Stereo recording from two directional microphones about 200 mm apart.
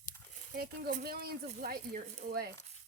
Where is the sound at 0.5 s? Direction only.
45° right (ahead or behind).